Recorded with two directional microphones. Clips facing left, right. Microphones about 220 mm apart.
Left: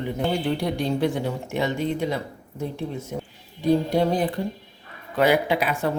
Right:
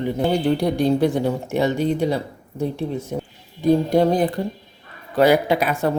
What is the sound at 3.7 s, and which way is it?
Speech, 45° right (ahead or behind).